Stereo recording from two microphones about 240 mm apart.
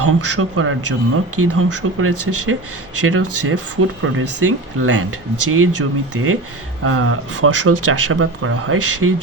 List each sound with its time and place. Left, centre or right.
0.0 s speech: right